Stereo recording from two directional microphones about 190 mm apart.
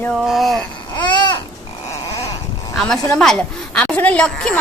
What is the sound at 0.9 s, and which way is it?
Babbling, 25° left (ahead or behind).